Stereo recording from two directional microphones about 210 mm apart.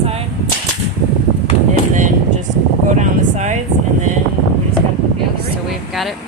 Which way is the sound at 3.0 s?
35° right (ahead or behind).